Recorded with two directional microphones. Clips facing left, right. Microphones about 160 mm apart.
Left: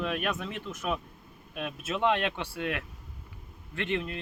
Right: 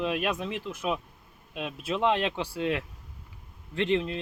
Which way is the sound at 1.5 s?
20° right (ahead or behind).